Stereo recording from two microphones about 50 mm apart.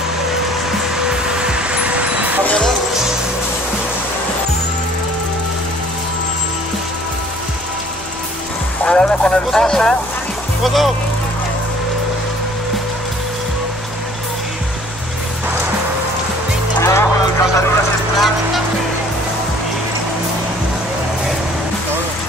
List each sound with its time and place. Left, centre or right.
0.9 s vehicle: centre
8.8 s music: left
9.5 s vehicle: centre
10.6 s music: centre
16.8 s a sound: left
18.1 s vehicle: centre